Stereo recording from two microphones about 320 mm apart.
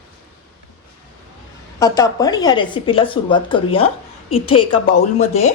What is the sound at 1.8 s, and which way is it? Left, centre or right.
Speech, centre.